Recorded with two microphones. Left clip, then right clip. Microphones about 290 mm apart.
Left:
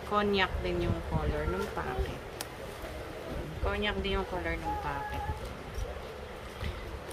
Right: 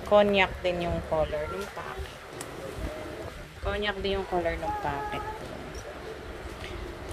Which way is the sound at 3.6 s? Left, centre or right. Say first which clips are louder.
Right 3 dB; centre.